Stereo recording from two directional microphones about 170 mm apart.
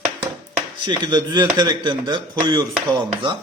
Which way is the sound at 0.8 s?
25° right (ahead or behind).